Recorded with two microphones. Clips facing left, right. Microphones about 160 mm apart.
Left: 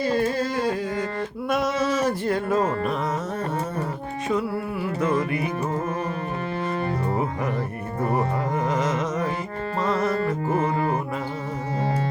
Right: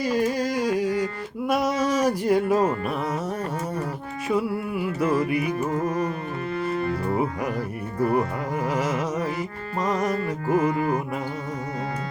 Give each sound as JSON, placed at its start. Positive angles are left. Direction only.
{"t": 0.0, "sound": "music", "side_deg": -10}
{"t": 1.5, "sound": "a sound", "side_deg": -10}
{"t": 4.7, "sound": "music", "side_deg": -10}
{"t": 5.4, "sound": "music", "side_deg": 35}
{"t": 8.6, "sound": "carnatic music", "side_deg": -10}
{"t": 9.8, "sound": "music", "side_deg": -15}
{"t": 10.5, "sound": "carnatic music", "side_deg": 30}